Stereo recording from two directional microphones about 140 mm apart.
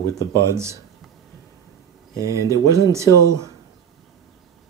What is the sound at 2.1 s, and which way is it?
Speech, 25° right (ahead or behind).